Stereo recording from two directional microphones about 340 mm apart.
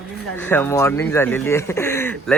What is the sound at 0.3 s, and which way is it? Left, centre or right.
Speech, centre.